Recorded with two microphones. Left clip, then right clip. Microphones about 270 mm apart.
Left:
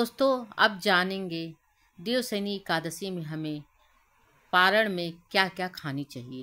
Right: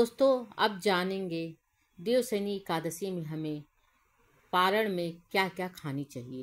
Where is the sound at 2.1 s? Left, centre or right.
Centre.